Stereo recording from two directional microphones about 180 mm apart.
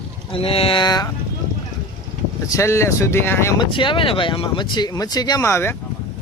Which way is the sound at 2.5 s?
15° left (ahead or behind).